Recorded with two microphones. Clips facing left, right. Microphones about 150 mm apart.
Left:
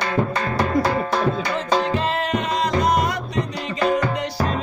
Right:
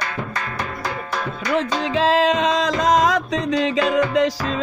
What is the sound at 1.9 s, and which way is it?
Music, 90° right.